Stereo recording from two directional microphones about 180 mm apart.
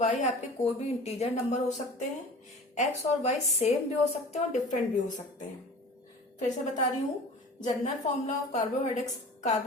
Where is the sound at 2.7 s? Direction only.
40° left (ahead or behind).